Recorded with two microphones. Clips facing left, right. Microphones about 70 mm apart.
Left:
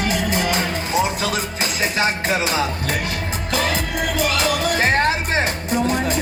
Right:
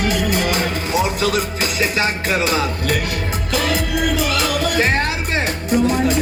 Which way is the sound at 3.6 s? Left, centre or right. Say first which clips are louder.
Right 3 dB; left.